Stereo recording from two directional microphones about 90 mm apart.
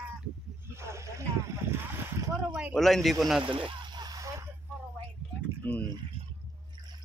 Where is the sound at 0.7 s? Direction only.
30° right (ahead or behind).